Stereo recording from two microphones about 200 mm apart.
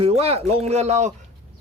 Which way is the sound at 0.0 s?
30° right (ahead or behind).